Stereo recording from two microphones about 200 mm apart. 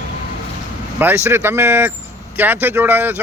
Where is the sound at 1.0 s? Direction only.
10° right (ahead or behind).